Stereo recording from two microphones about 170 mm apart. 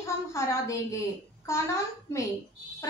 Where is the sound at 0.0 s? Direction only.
15° left (ahead or behind).